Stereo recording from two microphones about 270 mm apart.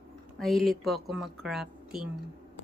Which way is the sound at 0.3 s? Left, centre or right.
Centre.